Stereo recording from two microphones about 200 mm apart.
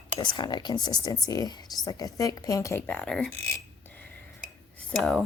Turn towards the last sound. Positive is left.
turn(degrees=0)  # may be behind; listen again after turning